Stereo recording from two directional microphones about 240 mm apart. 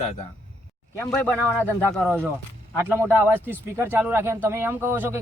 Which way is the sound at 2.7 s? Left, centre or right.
Centre.